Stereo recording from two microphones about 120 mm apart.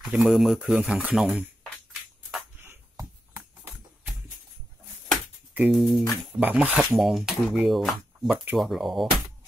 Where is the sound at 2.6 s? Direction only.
20° right (ahead or behind).